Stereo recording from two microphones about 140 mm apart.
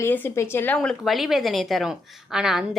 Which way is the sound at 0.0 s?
15° left (ahead or behind).